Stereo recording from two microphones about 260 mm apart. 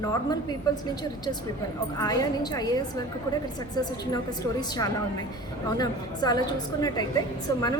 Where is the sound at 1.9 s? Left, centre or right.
Centre.